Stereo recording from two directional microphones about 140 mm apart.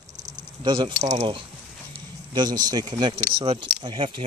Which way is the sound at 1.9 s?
30° right (ahead or behind).